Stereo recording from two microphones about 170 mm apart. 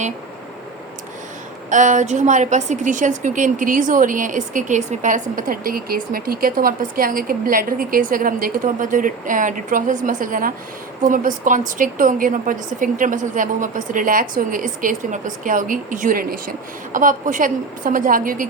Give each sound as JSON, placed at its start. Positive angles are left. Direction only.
{"t": 1.7, "sound": "a woman's voice", "side_deg": -45}